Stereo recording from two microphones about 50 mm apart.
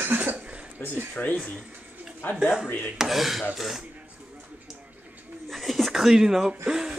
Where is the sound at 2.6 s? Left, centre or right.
Left.